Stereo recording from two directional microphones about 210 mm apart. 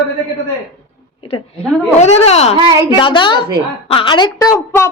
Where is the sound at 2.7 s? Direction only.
20° right (ahead or behind).